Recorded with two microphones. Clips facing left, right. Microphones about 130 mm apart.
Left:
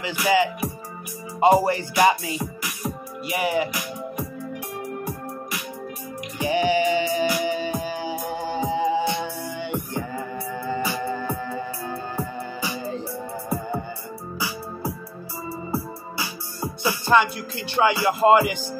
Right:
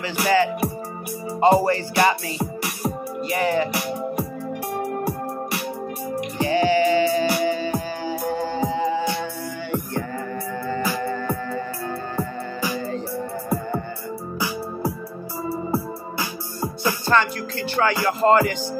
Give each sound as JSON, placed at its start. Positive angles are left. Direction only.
{"t": 0.0, "sound": "music", "side_deg": 15}
{"t": 6.4, "sound": "music", "side_deg": 15}
{"t": 12.6, "sound": "music", "side_deg": 15}
{"t": 15.7, "sound": "music", "side_deg": -50}
{"t": 16.8, "sound": "music", "side_deg": 15}